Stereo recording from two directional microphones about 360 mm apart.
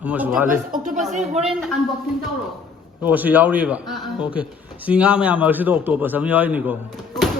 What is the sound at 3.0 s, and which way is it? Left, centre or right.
A man's voice, centre.